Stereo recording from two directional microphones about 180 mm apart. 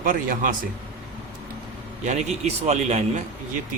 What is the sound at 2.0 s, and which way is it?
Speech, 40° right (ahead or behind).